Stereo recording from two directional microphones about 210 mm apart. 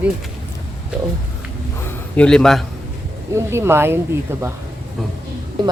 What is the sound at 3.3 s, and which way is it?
Speech, 15° right (ahead or behind).